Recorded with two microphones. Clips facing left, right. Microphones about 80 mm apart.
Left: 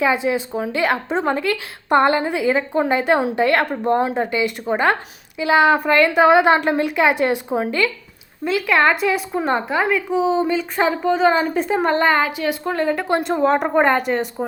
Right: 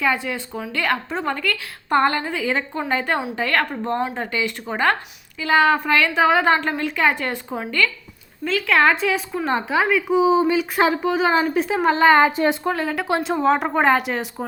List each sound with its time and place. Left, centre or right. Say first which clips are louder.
0.0 s a woman's voice: left 4 dB; centre
12.2 s a woman's voice: right 4 dB; right
12.6 s a woman's voice: left 2 dB; centre